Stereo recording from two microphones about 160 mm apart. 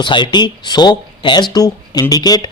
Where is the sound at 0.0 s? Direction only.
30° left (ahead or behind).